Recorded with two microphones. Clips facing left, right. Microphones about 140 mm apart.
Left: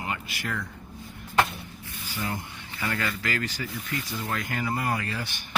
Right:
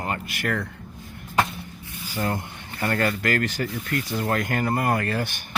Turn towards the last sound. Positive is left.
turn(degrees=-50)  # may be behind; listen again after turning